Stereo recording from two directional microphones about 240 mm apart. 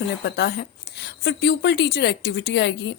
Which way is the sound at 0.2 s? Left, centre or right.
Left.